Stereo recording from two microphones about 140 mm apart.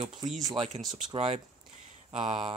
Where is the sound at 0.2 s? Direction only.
25° right (ahead or behind).